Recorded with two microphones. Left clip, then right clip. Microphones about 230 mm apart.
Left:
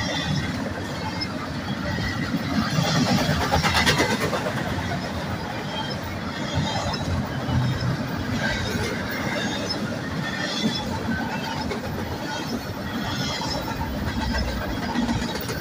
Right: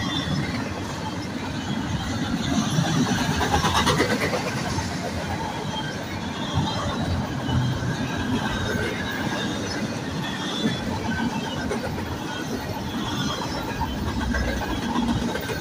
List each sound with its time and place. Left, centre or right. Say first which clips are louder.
3.8 s vehicle: left 1 dB; left